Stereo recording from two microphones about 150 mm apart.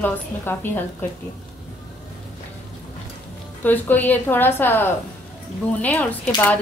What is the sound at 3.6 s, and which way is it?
Speech, 10° left (ahead or behind).